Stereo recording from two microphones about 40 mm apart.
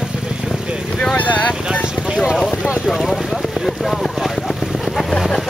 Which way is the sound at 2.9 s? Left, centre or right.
Centre.